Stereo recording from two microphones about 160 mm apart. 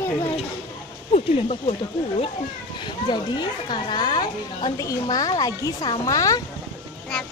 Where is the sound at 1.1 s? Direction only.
40° left (ahead or behind).